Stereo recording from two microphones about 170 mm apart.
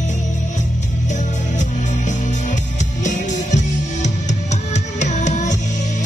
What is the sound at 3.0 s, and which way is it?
Music, 45° left (ahead or behind).